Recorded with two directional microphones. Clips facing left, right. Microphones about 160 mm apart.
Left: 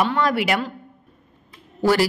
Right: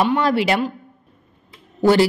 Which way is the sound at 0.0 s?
25° right (ahead or behind).